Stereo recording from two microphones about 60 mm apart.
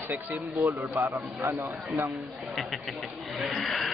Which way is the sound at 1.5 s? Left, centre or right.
Right.